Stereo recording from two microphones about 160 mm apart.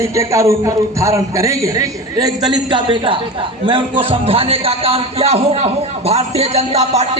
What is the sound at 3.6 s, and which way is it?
Music, 35° right (ahead or behind).